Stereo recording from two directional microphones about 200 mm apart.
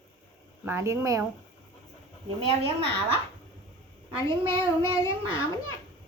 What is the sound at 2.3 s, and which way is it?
Speech, 30° right (ahead or behind).